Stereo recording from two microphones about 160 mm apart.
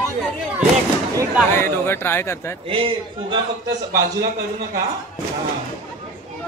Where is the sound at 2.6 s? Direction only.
35° right (ahead or behind).